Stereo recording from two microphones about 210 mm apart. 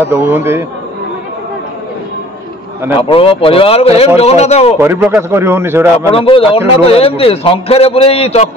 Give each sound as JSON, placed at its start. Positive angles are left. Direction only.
{"t": 0.0, "sound": "a man's voice", "side_deg": -10}
{"t": 3.0, "sound": "a man's voice", "side_deg": 25}
{"t": 4.7, "sound": "a man's voice", "side_deg": -10}
{"t": 6.1, "sound": "a man's voice", "side_deg": 25}